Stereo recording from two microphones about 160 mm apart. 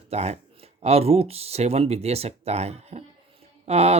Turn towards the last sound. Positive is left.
turn(degrees=-40)  # may be behind; listen again after turning